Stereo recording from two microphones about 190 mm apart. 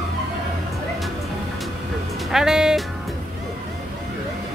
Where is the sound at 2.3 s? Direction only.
Centre (ahead or behind).